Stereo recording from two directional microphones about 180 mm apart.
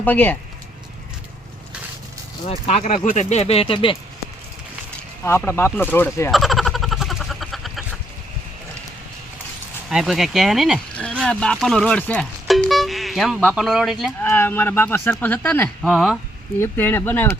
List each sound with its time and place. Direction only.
0.0 s speech: 10° left (ahead or behind)
2.5 s speech: 35° left (ahead or behind)
5.2 s speech: 15° left (ahead or behind)
6.3 s a sound: centre (ahead or behind)
9.9 s speech: centre (ahead or behind)
14.3 s speech: 10° left (ahead or behind)
16.6 s speech: 10° left (ahead or behind)